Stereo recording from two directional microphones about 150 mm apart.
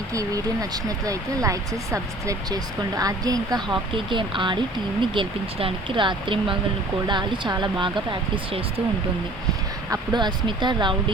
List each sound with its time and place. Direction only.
0.1 s speech: 25° right (ahead or behind)
9.9 s speech: 30° right (ahead or behind)